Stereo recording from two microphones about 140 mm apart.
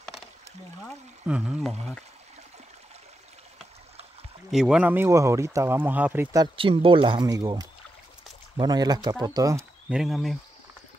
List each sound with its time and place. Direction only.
1.2 s speech: 5° right (ahead or behind)
4.5 s speech: 5° right (ahead or behind)
6.3 s speech: 35° right (ahead or behind)
9.8 s speech: 5° right (ahead or behind)